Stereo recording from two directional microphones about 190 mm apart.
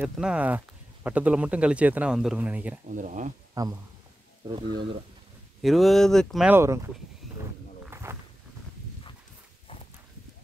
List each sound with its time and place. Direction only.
0.0 s speech: 5° right (ahead or behind)
2.9 s speech: 40° right (ahead or behind)
3.6 s speech: 20° right (ahead or behind)
5.6 s speech: centre (ahead or behind)
6.5 s speech: 15° right (ahead or behind)
7.8 s walk: 15° right (ahead or behind)